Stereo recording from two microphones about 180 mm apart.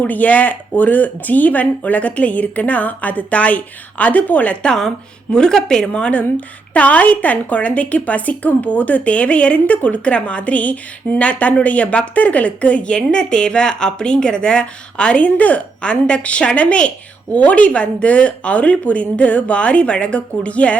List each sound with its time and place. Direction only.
0.0 s a woman's voice: 10° left (ahead or behind)